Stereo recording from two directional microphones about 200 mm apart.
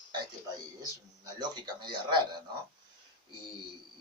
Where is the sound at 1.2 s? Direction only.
20° right (ahead or behind).